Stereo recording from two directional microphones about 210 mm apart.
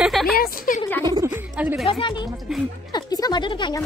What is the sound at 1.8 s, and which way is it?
A woman's voice, 25° left (ahead or behind).